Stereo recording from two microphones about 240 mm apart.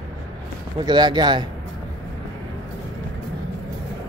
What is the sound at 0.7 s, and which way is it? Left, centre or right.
Speech, centre.